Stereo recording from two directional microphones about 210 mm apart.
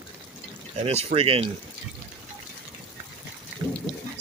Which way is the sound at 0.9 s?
30° right (ahead or behind).